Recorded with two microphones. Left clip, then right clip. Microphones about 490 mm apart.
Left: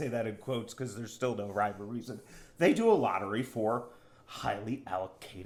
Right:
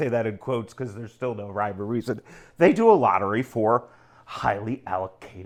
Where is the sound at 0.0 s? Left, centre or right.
Right.